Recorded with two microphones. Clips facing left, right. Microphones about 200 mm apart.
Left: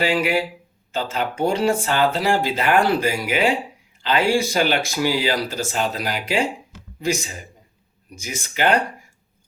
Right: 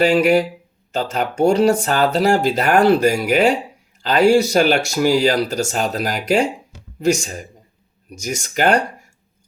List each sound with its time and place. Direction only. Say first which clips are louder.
0.0 s speech: right 6 dB; 45° right (ahead or behind)